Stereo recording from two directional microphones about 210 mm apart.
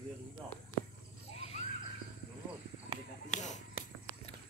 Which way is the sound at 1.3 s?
30° left (ahead or behind).